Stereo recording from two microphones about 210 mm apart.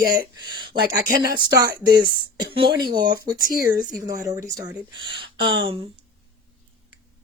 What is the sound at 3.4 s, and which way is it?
Speech, 45° left (ahead or behind).